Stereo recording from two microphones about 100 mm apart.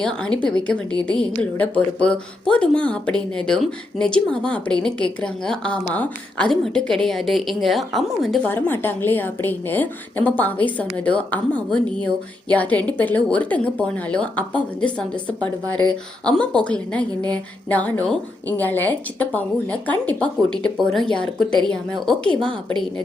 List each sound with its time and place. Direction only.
0.0 s a woman's voice: 10° left (ahead or behind)
8.4 s speech: 20° left (ahead or behind)